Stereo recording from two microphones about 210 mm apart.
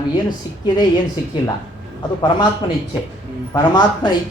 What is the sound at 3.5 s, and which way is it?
Speech, 20° left (ahead or behind).